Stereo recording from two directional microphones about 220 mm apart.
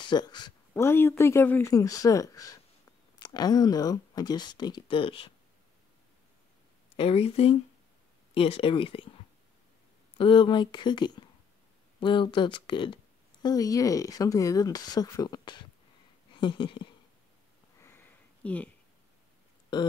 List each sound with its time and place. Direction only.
0.0 s speech: 20° left (ahead or behind)
7.0 s speech: 25° left (ahead or behind)
10.1 s speech: 25° left (ahead or behind)
17.7 s a sound: 10° left (ahead or behind)
19.7 s speech: 20° left (ahead or behind)